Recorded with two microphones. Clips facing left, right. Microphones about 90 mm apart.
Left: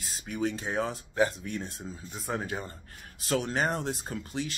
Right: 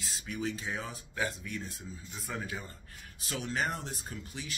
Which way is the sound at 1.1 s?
35° left (ahead or behind).